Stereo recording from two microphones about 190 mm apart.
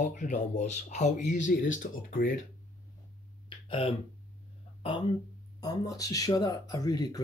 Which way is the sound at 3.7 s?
30° left (ahead or behind).